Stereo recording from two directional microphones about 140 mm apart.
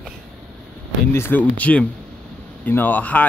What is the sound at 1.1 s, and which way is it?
Speech, 15° left (ahead or behind).